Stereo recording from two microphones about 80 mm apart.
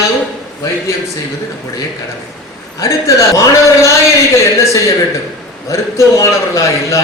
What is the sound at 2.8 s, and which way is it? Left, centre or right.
A man's voice, left.